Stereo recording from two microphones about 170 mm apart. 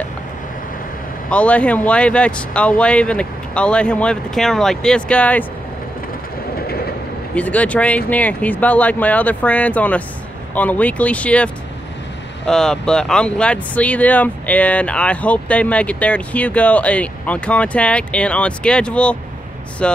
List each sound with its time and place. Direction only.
1.3 s speech: 5° left (ahead or behind)
6.5 s train: 65° left (ahead or behind)
7.3 s speech: 10° left (ahead or behind)